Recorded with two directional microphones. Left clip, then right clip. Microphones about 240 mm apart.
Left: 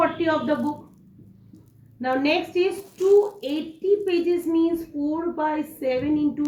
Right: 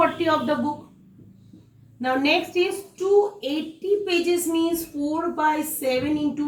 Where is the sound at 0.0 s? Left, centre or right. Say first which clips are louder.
Right 1 dB; centre.